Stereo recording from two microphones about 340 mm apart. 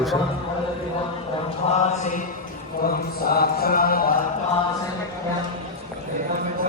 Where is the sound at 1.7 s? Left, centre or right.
Centre.